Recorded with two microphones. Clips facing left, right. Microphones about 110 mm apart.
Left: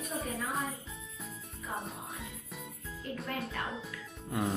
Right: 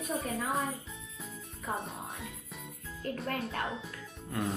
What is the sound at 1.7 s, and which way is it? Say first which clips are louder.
Music: right 3 dB; 50° right (ahead or behind).